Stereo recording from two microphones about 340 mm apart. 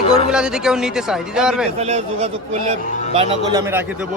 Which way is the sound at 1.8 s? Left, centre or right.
Centre.